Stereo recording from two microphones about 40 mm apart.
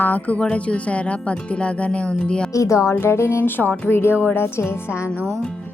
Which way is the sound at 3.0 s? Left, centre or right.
Left.